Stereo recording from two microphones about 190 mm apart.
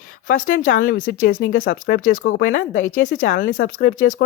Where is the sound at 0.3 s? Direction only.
45° left (ahead or behind).